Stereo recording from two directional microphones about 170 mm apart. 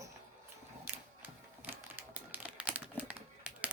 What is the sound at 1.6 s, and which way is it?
Typewriter, 10° right (ahead or behind).